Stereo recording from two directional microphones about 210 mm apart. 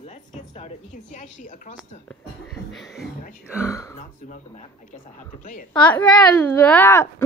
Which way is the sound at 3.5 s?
15° left (ahead or behind).